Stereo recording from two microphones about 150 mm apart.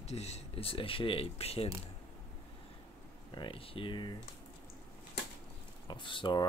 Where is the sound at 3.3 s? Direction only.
35° left (ahead or behind).